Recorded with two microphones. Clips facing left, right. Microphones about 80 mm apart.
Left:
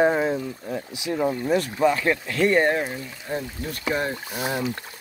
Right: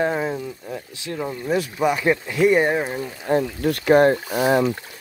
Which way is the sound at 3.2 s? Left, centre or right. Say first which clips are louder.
Right 10 dB; right.